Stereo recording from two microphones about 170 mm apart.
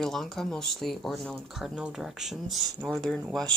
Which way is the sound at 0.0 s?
Centre (ahead or behind).